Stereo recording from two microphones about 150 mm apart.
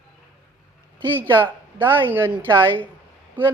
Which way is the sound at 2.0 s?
15° right (ahead or behind).